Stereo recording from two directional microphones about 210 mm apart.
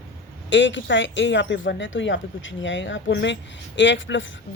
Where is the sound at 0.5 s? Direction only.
60° left (ahead or behind).